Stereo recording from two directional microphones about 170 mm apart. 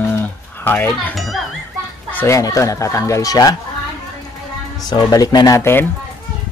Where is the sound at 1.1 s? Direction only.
Centre (ahead or behind).